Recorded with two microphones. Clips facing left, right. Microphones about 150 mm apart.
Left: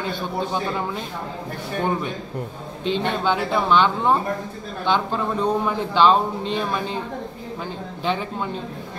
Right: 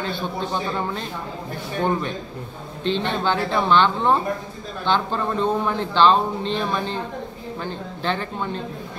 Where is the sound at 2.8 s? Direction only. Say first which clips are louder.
Even; 10° left (ahead or behind).